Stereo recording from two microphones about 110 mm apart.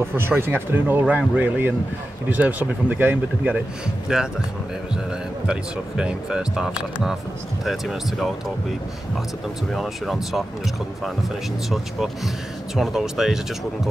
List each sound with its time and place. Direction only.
0.0 s speech: 20° right (ahead or behind); by 4.2 s 5° right (ahead or behind)
5.5 s speech: 10° right (ahead or behind)
12.7 s speech: 5° right (ahead or behind)